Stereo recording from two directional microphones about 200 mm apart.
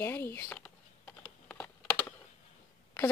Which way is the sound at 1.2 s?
10° left (ahead or behind).